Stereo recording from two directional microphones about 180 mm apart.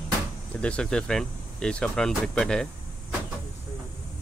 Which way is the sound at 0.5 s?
5° left (ahead or behind).